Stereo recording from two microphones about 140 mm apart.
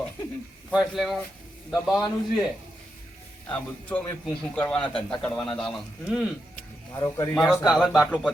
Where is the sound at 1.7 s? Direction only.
25° left (ahead or behind).